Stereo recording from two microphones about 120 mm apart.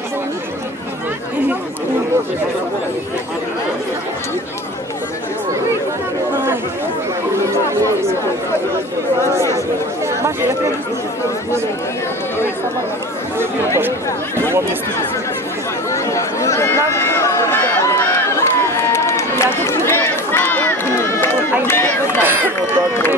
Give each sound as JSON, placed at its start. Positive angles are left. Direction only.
{"t": 13.7, "sound": "chatter", "side_deg": -20}
{"t": 15.9, "sound": "run", "side_deg": 25}
{"t": 22.2, "sound": "run", "side_deg": -15}